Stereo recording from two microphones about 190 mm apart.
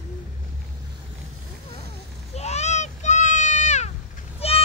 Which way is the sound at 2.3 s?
35° left (ahead or behind).